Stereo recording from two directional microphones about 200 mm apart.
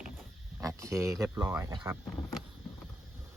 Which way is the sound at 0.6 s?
15° right (ahead or behind).